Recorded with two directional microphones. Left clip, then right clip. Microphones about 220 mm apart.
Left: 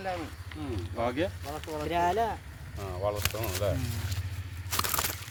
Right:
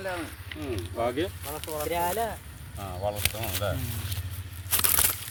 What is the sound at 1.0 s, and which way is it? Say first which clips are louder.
Speech: right 1 dB; 40° left (ahead or behind).